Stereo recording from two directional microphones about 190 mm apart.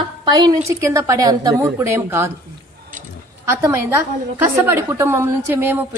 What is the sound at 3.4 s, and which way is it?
A woman's voice, 15° right (ahead or behind).